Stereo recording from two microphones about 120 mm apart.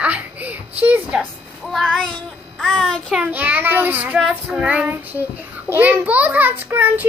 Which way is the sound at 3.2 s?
15° right (ahead or behind).